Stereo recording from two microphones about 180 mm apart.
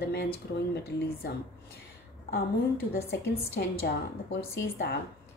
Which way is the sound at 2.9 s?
60° left (ahead or behind).